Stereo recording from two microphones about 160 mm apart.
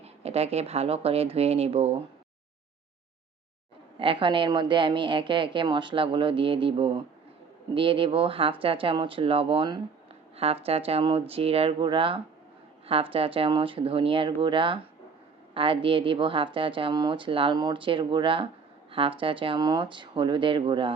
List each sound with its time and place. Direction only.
0.0 s speech: 40° right (ahead or behind)
3.9 s speech: 35° right (ahead or behind)